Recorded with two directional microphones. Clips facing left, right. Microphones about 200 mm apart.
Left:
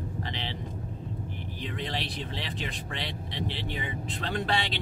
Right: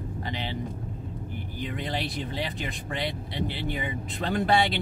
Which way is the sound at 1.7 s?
45° right (ahead or behind).